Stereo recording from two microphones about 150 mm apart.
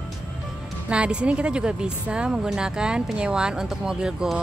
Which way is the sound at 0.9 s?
5° right (ahead or behind).